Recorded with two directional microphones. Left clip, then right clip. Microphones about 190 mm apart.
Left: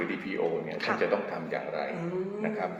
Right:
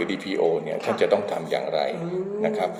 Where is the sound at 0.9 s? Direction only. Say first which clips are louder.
Right 6 dB; 10° left (ahead or behind).